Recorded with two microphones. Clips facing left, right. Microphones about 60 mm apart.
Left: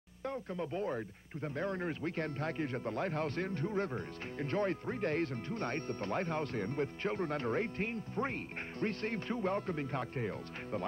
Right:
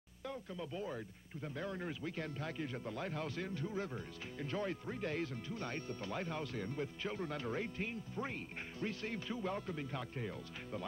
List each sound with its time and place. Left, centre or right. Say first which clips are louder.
0.2 s speech: left 6 dB; left